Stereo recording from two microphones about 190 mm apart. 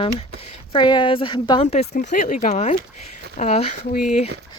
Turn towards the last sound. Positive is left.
turn(degrees=40)  # may be behind; listen again after turning